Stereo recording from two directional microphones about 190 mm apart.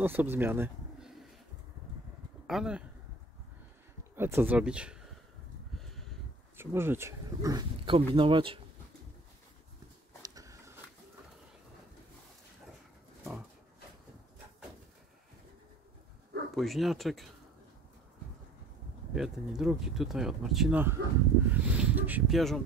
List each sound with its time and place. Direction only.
0.0 s speech: 10° right (ahead or behind)
2.4 s speech: 5° right (ahead or behind)
4.1 s speech: 10° right (ahead or behind)
5.8 s a sound: centre (ahead or behind)
6.5 s speech: 10° right (ahead or behind)
10.2 s biting: 20° right (ahead or behind)
16.5 s speech: centre (ahead or behind)
19.1 s speech: 5° right (ahead or behind)